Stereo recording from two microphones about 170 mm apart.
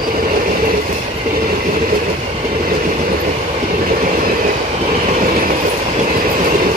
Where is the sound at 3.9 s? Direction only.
60° right (ahead or behind).